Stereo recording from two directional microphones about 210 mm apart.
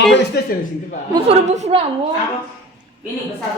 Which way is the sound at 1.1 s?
30° right (ahead or behind).